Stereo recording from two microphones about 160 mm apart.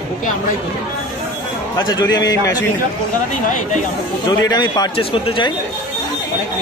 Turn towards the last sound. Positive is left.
turn(degrees=35)  # may be behind; listen again after turning